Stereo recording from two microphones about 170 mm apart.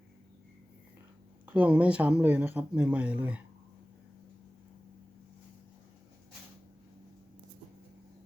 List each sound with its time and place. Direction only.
1.5 s speech: 10° right (ahead or behind)